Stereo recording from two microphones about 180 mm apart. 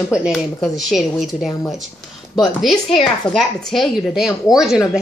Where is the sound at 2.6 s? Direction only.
Centre (ahead or behind).